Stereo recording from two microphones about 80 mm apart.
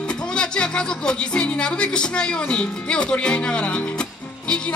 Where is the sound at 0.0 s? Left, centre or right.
Centre.